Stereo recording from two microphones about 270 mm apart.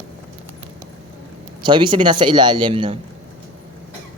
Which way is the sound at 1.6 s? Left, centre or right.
Centre.